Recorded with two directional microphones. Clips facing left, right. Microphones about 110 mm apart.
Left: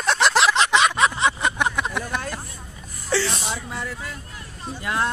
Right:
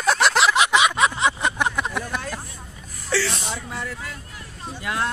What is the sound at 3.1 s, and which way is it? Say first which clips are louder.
Speech: left 1 dB; 25° left (ahead or behind).